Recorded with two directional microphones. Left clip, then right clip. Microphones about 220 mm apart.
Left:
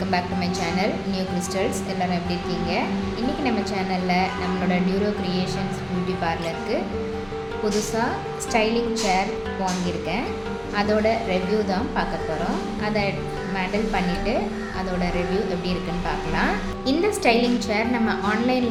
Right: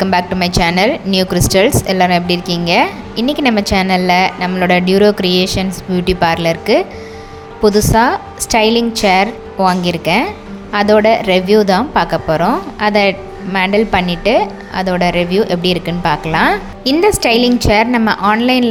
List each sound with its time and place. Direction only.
0.0 s a woman's voice: 45° right (ahead or behind)